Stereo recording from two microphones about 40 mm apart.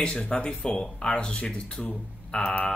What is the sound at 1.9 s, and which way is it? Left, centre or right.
Speech, left.